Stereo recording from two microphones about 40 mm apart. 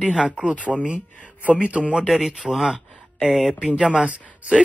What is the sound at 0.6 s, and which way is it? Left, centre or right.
Speech, right.